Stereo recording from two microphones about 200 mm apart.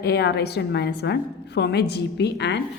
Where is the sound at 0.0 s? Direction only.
55° left (ahead or behind).